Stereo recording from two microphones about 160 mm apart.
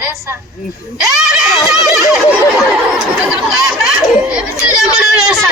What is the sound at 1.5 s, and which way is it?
Neigh, 20° left (ahead or behind).